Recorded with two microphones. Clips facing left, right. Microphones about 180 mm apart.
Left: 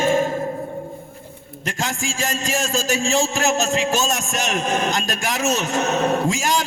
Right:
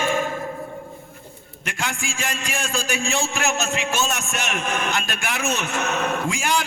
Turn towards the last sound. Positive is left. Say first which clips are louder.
# left 3 dB
turn(degrees=40)  # may be behind; listen again after turning